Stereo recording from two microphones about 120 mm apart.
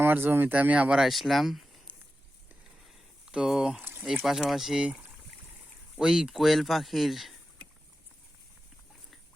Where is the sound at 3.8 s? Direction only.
20° right (ahead or behind).